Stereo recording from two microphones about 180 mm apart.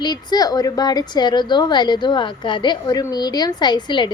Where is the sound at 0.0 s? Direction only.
25° left (ahead or behind).